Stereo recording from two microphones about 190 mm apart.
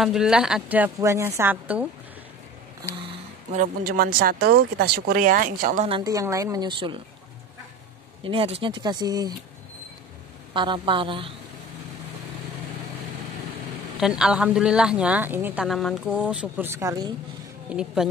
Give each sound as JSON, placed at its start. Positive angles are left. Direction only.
{"t": 0.0, "sound": "speech", "side_deg": -5}
{"t": 3.5, "sound": "speech", "side_deg": -50}
{"t": 5.9, "sound": "a woman's voice", "side_deg": -20}
{"t": 8.2, "sound": "a woman's voice", "side_deg": -30}
{"t": 10.5, "sound": "a woman's voice", "side_deg": -25}
{"t": 13.9, "sound": "speech", "side_deg": -5}
{"t": 17.6, "sound": "speech", "side_deg": -5}